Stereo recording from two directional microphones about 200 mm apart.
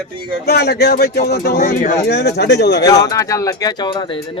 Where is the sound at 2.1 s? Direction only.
55° left (ahead or behind).